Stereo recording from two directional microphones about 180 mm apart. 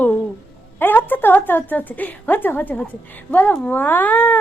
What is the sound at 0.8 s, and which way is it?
A woman's voice, 10° left (ahead or behind).